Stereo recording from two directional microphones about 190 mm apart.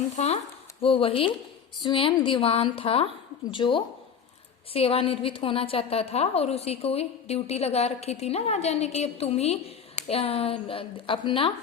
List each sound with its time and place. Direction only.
0.2 s a woman's voice: 35° left (ahead or behind)